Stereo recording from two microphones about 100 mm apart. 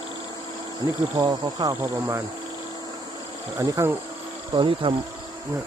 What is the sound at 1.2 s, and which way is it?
Speech, 40° right (ahead or behind).